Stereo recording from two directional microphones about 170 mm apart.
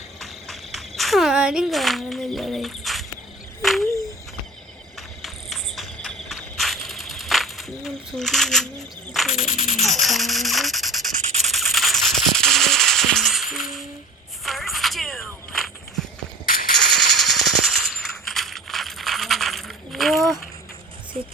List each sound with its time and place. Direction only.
0.2 s a sound: centre (ahead or behind)
4.9 s insect: centre (ahead or behind)
9.3 s music: 45° left (ahead or behind)
9.8 s speech: centre (ahead or behind)
11.4 s music: centre (ahead or behind)
14.4 s walk: centre (ahead or behind)
16.7 s a sound: centre (ahead or behind)